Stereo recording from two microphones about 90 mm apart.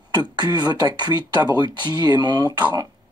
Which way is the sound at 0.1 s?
50° right (ahead or behind).